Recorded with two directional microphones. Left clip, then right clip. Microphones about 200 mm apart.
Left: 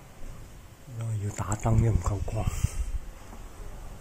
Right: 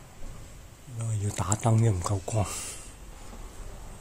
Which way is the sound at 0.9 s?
10° right (ahead or behind).